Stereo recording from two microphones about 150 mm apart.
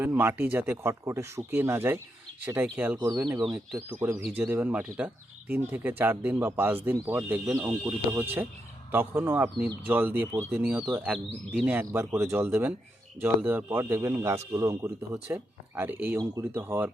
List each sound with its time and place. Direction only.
0.0 s speech: 15° right (ahead or behind)
3.1 s speech: 25° right (ahead or behind)
3.4 s speech: centre (ahead or behind)
3.8 s speech: 10° right (ahead or behind)